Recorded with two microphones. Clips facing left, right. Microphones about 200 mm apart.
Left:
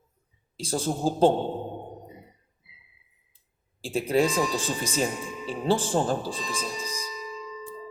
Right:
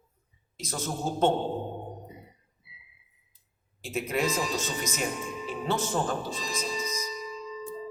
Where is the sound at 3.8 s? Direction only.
30° left (ahead or behind).